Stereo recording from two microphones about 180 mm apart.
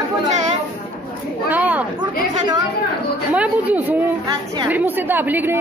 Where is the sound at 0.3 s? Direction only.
40° right (ahead or behind).